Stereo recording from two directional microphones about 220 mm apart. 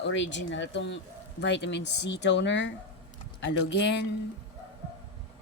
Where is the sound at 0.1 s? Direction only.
55° left (ahead or behind).